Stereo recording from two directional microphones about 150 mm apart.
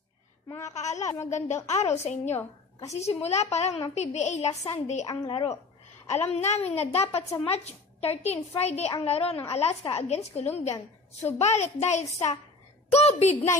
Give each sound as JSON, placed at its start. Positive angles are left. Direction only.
{"t": 0.5, "sound": "a child's voice", "side_deg": 20}
{"t": 0.7, "sound": "a child's voice", "side_deg": 50}
{"t": 1.0, "sound": "a child's voice", "side_deg": 20}
{"t": 1.7, "sound": "a child's voice", "side_deg": 45}
{"t": 5.0, "sound": "a woman's voice", "side_deg": 30}
{"t": 6.2, "sound": "a child's voice", "side_deg": 45}